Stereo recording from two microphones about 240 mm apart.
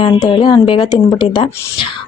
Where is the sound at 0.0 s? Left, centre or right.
Centre.